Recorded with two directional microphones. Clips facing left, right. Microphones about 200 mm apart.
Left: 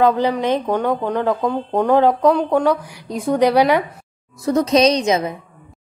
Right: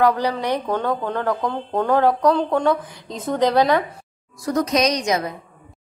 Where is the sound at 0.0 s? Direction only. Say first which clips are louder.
Left 3 dB; 20° left (ahead or behind).